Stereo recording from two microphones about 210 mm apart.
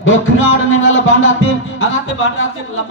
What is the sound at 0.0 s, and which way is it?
Music, 65° left (ahead or behind).